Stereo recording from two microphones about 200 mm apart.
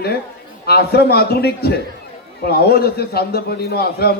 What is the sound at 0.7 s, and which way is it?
A man's voice, 50° left (ahead or behind).